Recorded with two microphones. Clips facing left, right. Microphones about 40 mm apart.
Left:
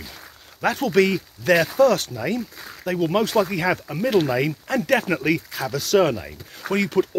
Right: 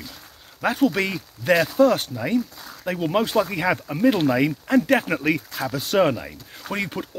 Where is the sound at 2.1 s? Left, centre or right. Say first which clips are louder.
Right 2 dB; centre.